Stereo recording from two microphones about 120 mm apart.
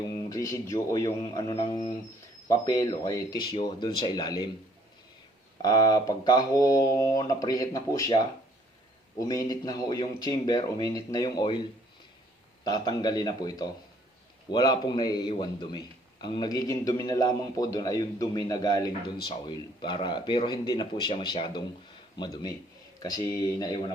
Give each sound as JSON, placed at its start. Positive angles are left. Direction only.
{"t": 0.0, "sound": "a man's voice", "side_deg": 35}
{"t": 5.6, "sound": "a man's voice", "side_deg": 30}
{"t": 12.6, "sound": "a man's voice", "side_deg": 35}